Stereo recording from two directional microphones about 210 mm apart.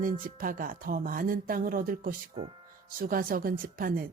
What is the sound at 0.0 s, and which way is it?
Speech, 40° right (ahead or behind).